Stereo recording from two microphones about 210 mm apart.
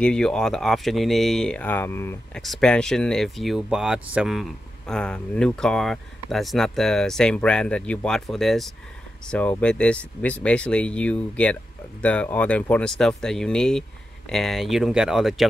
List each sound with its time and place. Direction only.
0.0 s speech: 5° left (ahead or behind)